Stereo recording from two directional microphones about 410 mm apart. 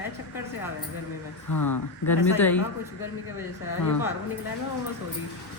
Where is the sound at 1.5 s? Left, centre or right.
Left.